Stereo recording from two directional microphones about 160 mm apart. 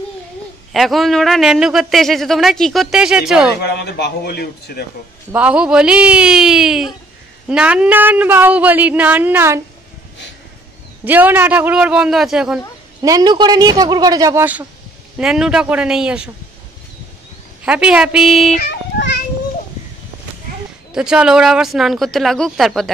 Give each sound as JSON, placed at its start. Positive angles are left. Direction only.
{"t": 0.7, "sound": "speech", "side_deg": 0}
{"t": 3.6, "sound": "speech", "side_deg": 90}
{"t": 5.3, "sound": "speech", "side_deg": -5}
{"t": 11.1, "sound": "speech", "side_deg": -10}
{"t": 13.0, "sound": "speech", "side_deg": -25}
{"t": 15.1, "sound": "speech", "side_deg": -5}
{"t": 17.6, "sound": "speech", "side_deg": -5}
{"t": 18.6, "sound": "a sound", "side_deg": 90}
{"t": 20.9, "sound": "speech", "side_deg": -5}